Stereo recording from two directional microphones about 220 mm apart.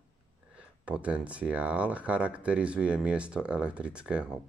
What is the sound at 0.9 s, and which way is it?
Speech, 5° right (ahead or behind).